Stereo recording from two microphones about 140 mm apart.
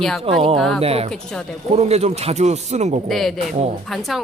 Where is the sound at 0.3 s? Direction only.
45° right (ahead or behind).